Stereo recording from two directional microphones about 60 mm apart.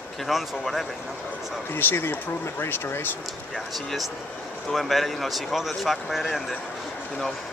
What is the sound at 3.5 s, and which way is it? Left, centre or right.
Speech, centre.